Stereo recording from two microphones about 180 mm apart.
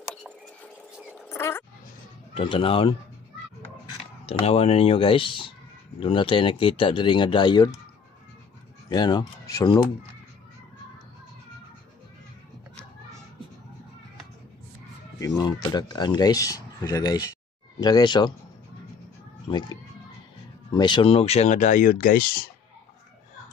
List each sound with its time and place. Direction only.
0.1 s a sound: 5° left (ahead or behind)
1.3 s dog: 15° left (ahead or behind)
2.3 s speech: 30° left (ahead or behind)
4.3 s speech: 35° left (ahead or behind)
8.8 s speech: 25° left (ahead or behind)
15.1 s speech: 20° left (ahead or behind)
19.4 s speech: 25° left (ahead or behind); by 22.5 s 55° left (ahead or behind)